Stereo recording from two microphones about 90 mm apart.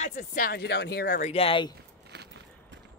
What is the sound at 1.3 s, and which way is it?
Speech, 90° left.